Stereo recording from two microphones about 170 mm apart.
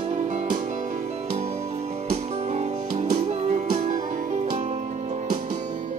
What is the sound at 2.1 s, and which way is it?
Music, 40° right (ahead or behind).